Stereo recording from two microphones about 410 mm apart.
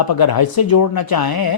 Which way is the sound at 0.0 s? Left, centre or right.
Left.